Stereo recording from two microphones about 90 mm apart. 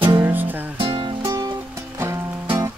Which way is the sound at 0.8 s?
70° right (ahead or behind).